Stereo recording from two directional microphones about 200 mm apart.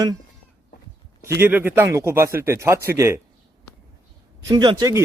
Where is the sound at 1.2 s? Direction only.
10° right (ahead or behind).